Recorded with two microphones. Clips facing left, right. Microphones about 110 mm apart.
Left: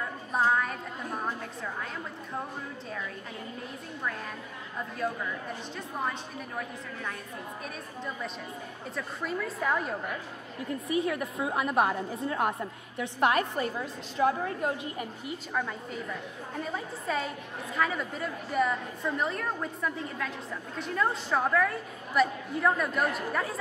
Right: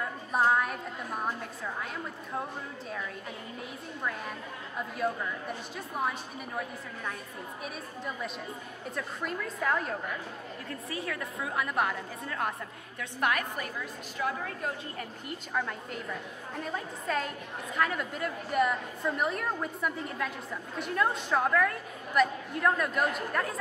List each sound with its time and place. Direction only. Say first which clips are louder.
0.3 s a sound: even; 5° right (ahead or behind)
4.7 s a woman's voice: right 1 dB; 5° right (ahead or behind)
7.6 s a woman's voice: right 3 dB; 5° right (ahead or behind)
10.7 s a woman's voice: left 8 dB; 20° left (ahead or behind)
15.0 s a woman's voice: left 3 dB; 5° left (ahead or behind)